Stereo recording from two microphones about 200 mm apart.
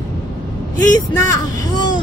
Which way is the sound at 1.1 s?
15° left (ahead or behind).